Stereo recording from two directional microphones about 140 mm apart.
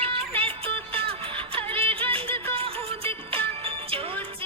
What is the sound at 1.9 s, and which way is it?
Music, 40° right (ahead or behind).